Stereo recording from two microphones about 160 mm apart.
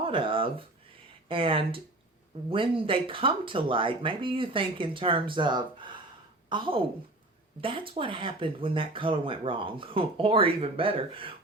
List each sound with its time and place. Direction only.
0.0 s speech: 35° right (ahead or behind)